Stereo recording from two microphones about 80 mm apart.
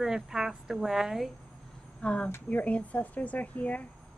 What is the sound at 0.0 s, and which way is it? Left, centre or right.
A woman's voice, centre.